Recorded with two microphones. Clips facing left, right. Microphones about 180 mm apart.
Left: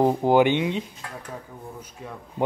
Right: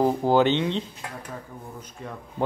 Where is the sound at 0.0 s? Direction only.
15° left (ahead or behind).